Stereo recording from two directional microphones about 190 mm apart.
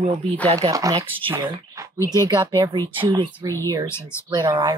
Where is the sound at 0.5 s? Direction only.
20° right (ahead or behind).